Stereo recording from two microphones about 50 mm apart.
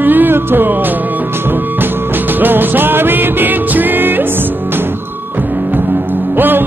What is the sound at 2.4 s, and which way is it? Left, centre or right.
Music, right.